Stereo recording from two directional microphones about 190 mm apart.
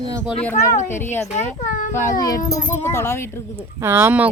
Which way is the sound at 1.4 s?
40° left (ahead or behind).